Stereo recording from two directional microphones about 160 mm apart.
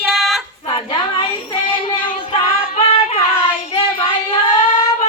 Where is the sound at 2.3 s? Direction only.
40° left (ahead or behind).